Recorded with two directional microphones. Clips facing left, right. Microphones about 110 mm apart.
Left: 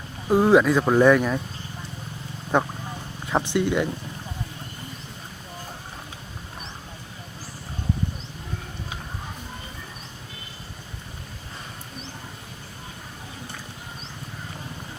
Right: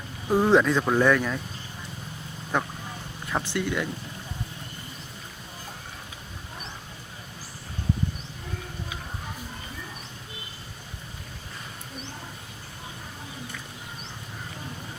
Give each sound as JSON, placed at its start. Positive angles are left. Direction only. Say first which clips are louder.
{"t": 0.3, "sound": "speech", "louder": "left 3 dB", "side_deg": 15}
{"t": 2.5, "sound": "speech", "louder": "left 5 dB", "side_deg": 20}